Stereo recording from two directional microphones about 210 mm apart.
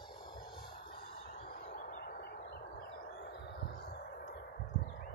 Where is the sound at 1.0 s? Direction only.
45° left (ahead or behind).